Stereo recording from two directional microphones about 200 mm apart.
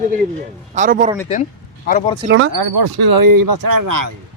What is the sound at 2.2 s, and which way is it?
Speech, 80° right.